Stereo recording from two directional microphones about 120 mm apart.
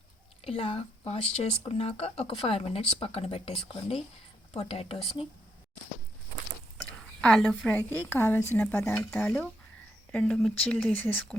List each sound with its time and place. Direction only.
0.4 s speech: 55° left (ahead or behind)
4.5 s speech: 50° left (ahead or behind)
6.7 s a woman's voice: 5° left (ahead or behind)
9.0 s speech: 10° left (ahead or behind)